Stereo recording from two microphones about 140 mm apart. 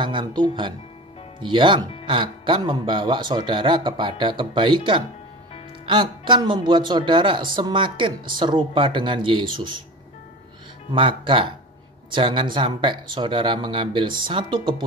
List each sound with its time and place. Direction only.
0.0 s a man's voice: 35° right (ahead or behind)
10.9 s a man's voice: 35° right (ahead or behind)